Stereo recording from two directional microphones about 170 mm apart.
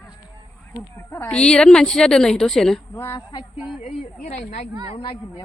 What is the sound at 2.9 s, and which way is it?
Speech, 20° left (ahead or behind).